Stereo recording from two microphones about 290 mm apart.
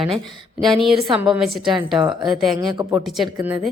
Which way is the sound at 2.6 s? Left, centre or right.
Centre.